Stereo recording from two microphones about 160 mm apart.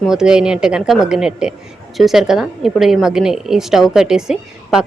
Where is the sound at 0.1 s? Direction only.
5° right (ahead or behind).